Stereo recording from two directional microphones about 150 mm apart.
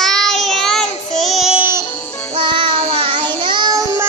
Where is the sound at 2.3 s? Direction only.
35° right (ahead or behind).